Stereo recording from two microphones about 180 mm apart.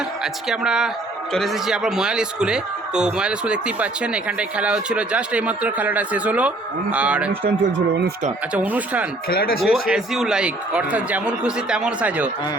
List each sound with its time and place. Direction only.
0.4 s speech: 5° right (ahead or behind)
7.6 s speech: 65° right (ahead or behind)
8.5 s speech: 10° right (ahead or behind)
9.3 s speech: 55° left (ahead or behind)
9.9 s speech: centre (ahead or behind)